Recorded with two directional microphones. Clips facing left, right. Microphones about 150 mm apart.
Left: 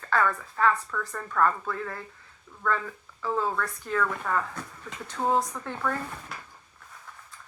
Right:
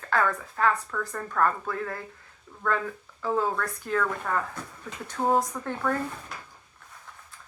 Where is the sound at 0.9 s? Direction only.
20° right (ahead or behind).